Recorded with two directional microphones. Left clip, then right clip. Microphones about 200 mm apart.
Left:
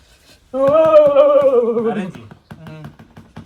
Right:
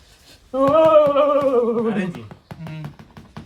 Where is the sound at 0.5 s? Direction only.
10° right (ahead or behind).